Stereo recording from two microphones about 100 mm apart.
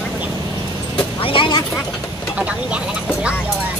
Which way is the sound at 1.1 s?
65° left (ahead or behind).